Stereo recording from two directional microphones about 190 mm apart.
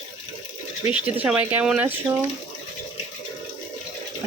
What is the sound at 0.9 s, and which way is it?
Speech, 10° right (ahead or behind).